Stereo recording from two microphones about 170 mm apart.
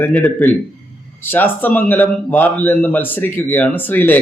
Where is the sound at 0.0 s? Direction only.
10° left (ahead or behind).